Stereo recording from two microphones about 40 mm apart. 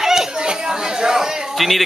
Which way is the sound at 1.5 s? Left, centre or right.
Centre.